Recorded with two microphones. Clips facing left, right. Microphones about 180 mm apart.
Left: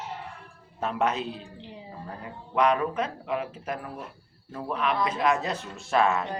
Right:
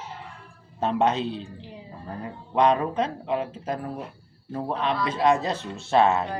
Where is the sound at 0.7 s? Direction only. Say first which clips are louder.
Right 4 dB; 30° right (ahead or behind).